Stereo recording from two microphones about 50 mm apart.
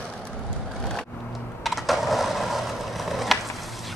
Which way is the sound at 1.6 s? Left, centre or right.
Centre.